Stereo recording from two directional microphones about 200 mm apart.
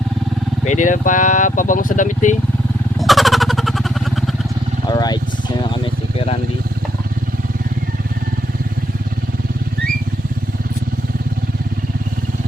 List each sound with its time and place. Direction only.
0.6 s speech: 35° left (ahead or behind)
3.0 s vehicle: centre (ahead or behind)
4.9 s speech: 20° left (ahead or behind)
5.8 s vehicle: 30° left (ahead or behind)